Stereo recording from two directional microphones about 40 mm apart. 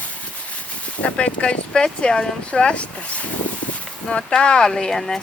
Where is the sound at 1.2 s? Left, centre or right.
Left.